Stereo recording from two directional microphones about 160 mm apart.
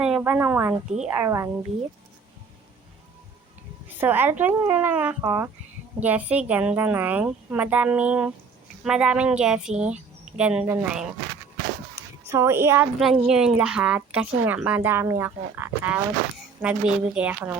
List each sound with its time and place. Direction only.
0.0 s a woman's voice: 5° right (ahead or behind)
3.9 s a woman's voice: 15° right (ahead or behind)
12.3 s a woman's voice: 15° right (ahead or behind)
13.0 s a woman's voice: 5° right (ahead or behind)